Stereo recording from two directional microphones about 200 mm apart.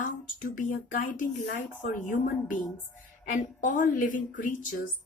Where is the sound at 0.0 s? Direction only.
40° left (ahead or behind).